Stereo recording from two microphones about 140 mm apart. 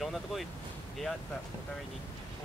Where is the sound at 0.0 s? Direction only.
Centre (ahead or behind).